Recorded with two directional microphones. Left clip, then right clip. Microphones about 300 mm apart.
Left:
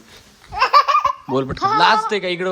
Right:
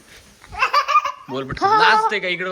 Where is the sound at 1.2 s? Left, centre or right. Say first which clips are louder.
Left 1 dB; centre.